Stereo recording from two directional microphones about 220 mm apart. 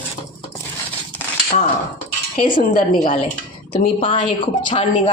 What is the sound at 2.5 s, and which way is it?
A woman's voice, 20° left (ahead or behind).